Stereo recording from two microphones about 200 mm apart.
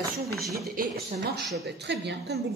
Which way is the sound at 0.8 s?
50° right (ahead or behind).